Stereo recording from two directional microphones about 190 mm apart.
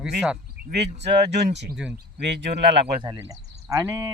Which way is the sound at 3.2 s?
15° right (ahead or behind).